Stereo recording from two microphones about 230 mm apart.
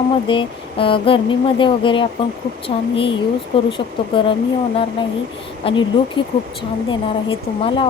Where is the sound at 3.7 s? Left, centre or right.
Left.